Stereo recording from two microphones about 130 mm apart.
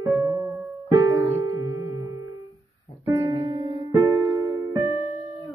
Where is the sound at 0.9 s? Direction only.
25° right (ahead or behind).